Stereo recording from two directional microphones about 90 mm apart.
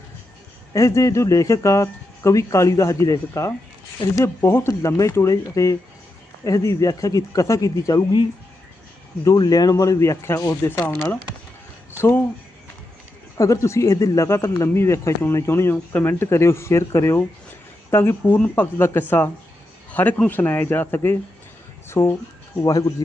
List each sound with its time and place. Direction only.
0.7 s speech: 35° left (ahead or behind)
9.2 s speech: 45° left (ahead or behind)
10.6 s speech: 25° left (ahead or behind)
13.3 s a man's voice: 35° left (ahead or behind)